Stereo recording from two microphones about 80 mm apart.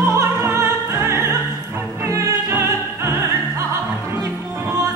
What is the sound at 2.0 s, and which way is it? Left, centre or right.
Opera, right.